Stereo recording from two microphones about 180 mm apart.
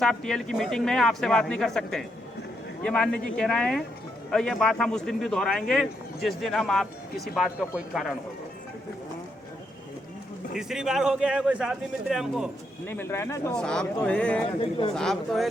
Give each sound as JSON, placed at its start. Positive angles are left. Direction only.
{"t": 0.0, "sound": "a man's voice", "side_deg": 5}
{"t": 10.6, "sound": "a man's voice", "side_deg": -5}
{"t": 12.9, "sound": "speech", "side_deg": 15}
{"t": 13.6, "sound": "a man's voice", "side_deg": 5}
{"t": 14.6, "sound": "speech", "side_deg": 30}
{"t": 14.9, "sound": "a man's voice", "side_deg": 0}